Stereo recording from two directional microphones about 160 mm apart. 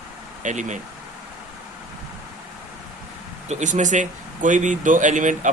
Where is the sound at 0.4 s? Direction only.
50° right (ahead or behind).